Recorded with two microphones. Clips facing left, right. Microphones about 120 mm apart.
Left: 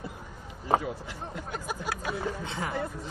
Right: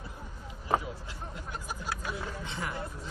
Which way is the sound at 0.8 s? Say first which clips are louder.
Left 5 dB; 60° left (ahead or behind).